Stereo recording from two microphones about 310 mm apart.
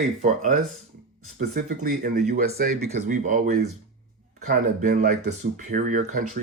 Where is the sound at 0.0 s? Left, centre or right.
Right.